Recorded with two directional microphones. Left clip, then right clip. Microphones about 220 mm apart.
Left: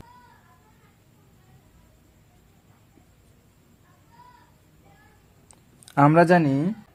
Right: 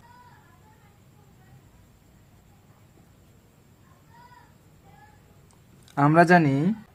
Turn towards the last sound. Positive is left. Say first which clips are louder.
# even
turn(degrees=0)  # may be behind; listen again after turning